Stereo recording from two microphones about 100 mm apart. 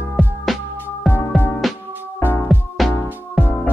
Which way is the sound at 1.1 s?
20° left (ahead or behind).